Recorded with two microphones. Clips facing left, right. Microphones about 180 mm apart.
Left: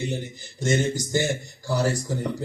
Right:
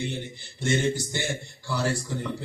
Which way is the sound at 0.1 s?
40° left (ahead or behind).